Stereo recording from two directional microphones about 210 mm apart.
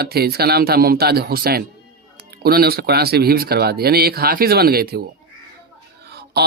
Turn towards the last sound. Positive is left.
turn(degrees=-50)  # may be behind; listen again after turning